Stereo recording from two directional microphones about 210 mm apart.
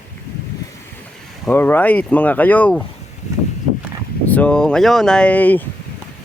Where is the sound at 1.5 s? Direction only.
10° left (ahead or behind).